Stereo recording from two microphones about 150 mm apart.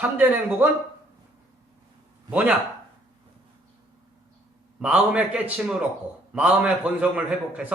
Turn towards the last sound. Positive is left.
turn(degrees=-10)  # may be behind; listen again after turning